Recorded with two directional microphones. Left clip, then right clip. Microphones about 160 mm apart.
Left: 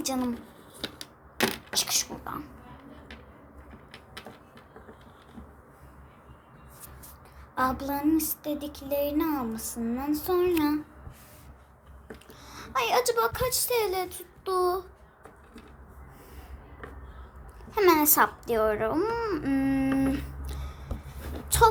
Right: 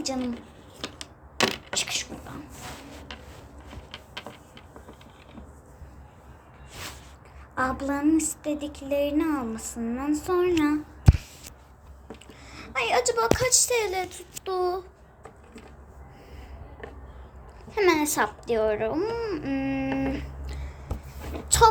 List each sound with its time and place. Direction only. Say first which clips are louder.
0.0 s speech: even; 10° left (ahead or behind)
1.7 s speech: left 1 dB; 10° left (ahead or behind)
7.5 s speech: right 1 dB; centre (ahead or behind)
12.3 s a woman's voice: left 1 dB; 5° left (ahead or behind)
17.7 s babbling: left 1 dB; 15° left (ahead or behind)
21.5 s speech: right 2 dB; 20° right (ahead or behind)